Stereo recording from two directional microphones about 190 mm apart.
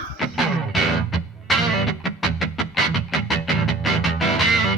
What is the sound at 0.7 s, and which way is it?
Music, centre (ahead or behind).